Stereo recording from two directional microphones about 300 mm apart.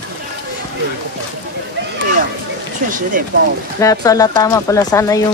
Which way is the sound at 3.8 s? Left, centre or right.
Centre.